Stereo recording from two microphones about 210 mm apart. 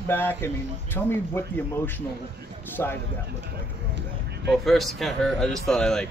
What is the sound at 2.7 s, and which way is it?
Speech, 10° left (ahead or behind).